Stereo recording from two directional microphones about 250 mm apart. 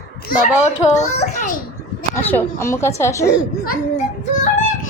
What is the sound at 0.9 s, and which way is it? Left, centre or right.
Speech, left.